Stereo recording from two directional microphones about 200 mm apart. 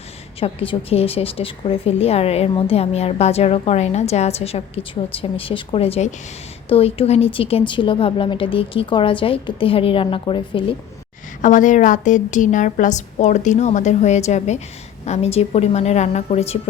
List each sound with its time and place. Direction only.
0.3 s a woman's voice: 25° left (ahead or behind)
11.4 s a woman's voice: 40° left (ahead or behind)